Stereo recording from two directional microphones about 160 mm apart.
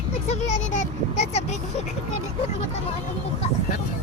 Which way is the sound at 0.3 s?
50° left (ahead or behind).